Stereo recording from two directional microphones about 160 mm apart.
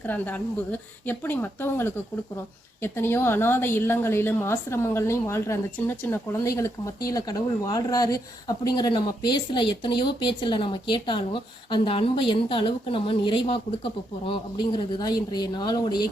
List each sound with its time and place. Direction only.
0.0 s a woman's voice: 10° left (ahead or behind); by 16.0 s 25° left (ahead or behind)